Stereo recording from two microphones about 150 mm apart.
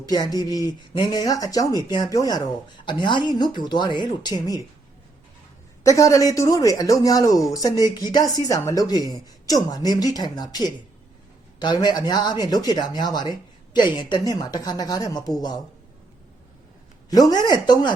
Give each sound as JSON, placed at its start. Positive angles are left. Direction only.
{"t": 0.0, "sound": "speech", "side_deg": 25}
{"t": 5.8, "sound": "speech", "side_deg": 20}
{"t": 17.1, "sound": "speech", "side_deg": 25}